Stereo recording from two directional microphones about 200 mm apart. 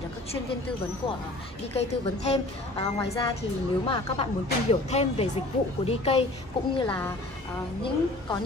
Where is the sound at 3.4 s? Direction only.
30° left (ahead or behind).